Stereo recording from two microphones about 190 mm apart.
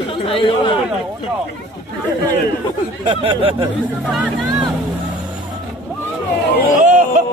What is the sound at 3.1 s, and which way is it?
Speech, 30° right (ahead or behind).